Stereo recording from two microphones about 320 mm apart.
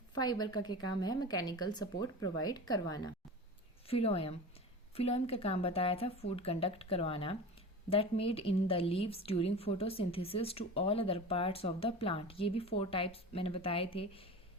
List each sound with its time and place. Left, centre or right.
0.1 s a woman's voice: centre